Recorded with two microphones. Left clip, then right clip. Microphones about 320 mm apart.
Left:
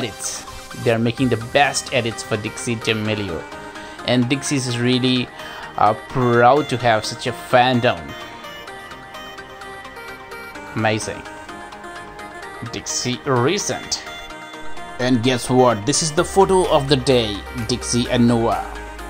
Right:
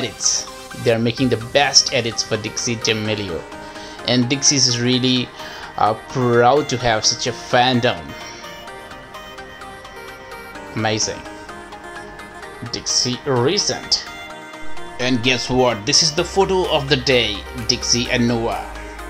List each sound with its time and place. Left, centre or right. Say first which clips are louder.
0.8 s speech: right 1 dB; centre
10.7 s speech: even; centre
12.7 s speech: right 5 dB; centre
15.0 s speech: right 1 dB; centre